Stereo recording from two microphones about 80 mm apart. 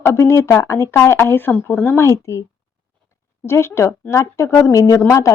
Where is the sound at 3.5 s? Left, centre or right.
Left.